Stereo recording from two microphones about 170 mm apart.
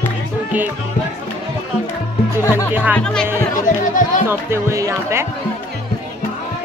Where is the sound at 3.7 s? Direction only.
50° left (ahead or behind).